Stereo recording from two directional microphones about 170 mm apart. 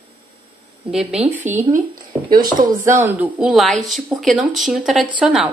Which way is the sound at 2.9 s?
10° right (ahead or behind).